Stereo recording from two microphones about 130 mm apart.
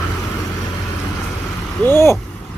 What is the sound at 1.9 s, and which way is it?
Vehicle, 20° left (ahead or behind).